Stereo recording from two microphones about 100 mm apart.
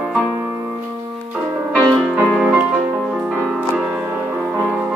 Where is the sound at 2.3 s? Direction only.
10° right (ahead or behind).